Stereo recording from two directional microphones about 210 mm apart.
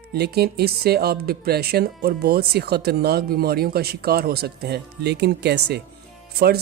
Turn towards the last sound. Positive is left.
turn(degrees=-50)  # may be behind; listen again after turning